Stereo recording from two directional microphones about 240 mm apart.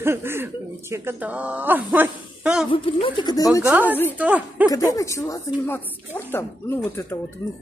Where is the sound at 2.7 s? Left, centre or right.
Left.